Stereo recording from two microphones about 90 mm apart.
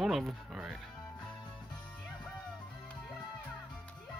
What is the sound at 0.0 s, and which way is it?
Speech, centre (ahead or behind).